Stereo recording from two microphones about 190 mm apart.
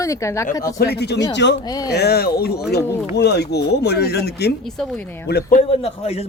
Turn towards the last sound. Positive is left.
turn(degrees=30)  # may be behind; listen again after turning